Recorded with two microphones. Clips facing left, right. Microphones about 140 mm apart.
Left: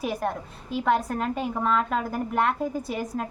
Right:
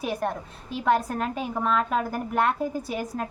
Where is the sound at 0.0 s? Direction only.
Centre (ahead or behind).